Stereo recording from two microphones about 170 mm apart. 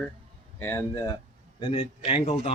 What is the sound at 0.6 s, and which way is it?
Speech, 15° left (ahead or behind).